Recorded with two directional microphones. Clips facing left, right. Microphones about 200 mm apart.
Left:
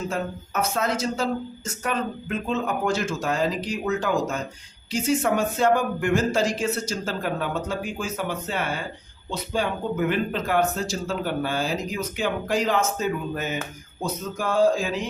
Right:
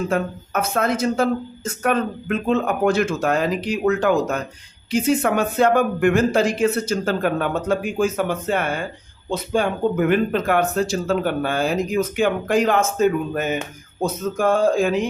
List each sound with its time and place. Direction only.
0.1 s speech: 55° right (ahead or behind)